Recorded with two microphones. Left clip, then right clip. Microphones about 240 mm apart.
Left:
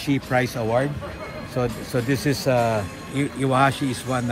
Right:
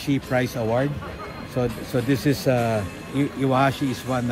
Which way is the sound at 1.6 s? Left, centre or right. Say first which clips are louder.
Even; left.